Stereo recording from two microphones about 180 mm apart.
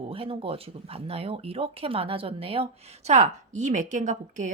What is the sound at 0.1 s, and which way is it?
Speech, 30° right (ahead or behind).